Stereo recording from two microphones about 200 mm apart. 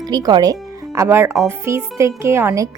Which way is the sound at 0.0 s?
20° right (ahead or behind).